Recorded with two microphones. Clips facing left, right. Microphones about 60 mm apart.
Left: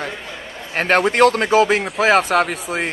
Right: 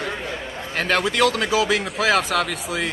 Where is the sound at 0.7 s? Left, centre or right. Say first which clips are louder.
Left 5 dB; left.